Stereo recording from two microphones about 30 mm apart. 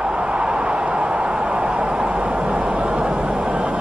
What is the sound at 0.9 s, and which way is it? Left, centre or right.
Vehicle, right.